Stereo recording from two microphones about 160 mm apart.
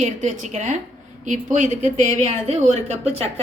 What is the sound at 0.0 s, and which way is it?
A woman's voice, 50° right (ahead or behind).